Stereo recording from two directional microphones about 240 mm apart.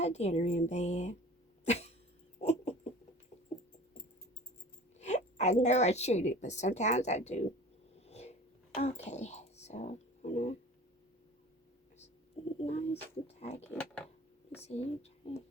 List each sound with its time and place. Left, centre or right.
0.0 s speech: left
1.6 s cough: left
2.4 s a sound: left
4.9 s speech: left
7.9 s whispering: left
12.5 s speech: left
13.7 s speech: centre
14.6 s speech: left